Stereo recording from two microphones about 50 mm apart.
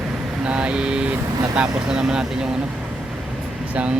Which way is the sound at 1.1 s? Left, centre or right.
Centre.